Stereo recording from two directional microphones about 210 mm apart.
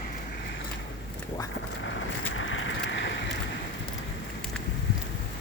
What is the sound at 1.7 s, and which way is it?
Vehicle, 65° left (ahead or behind).